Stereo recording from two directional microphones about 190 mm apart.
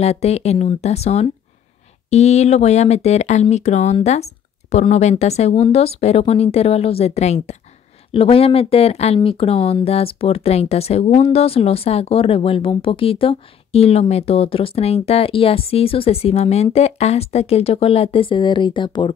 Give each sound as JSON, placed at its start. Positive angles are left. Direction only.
{"t": 0.0, "sound": "speech", "side_deg": 35}